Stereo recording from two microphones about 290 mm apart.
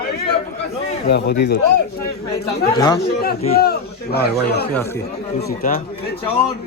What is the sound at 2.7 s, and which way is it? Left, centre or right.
Speech, centre.